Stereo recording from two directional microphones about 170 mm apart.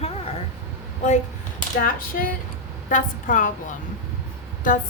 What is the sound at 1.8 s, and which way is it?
A woman's voice, 55° left (ahead or behind).